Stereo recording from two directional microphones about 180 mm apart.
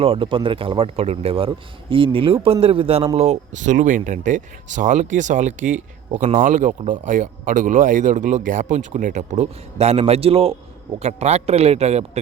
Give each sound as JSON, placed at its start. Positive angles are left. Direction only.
{"t": 0.0, "sound": "speech", "side_deg": -30}